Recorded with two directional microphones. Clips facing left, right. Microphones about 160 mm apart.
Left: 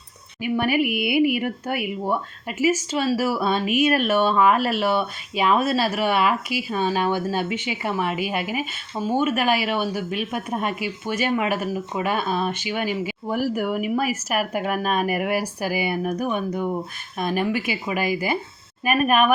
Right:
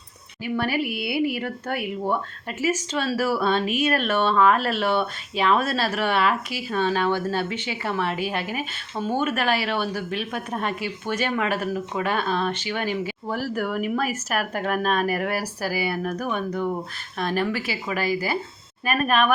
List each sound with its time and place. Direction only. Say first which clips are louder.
0.4 s speech: left 4 dB; 15° left (ahead or behind)